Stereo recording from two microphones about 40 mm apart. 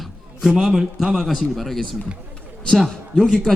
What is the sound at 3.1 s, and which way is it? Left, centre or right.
Speech, centre.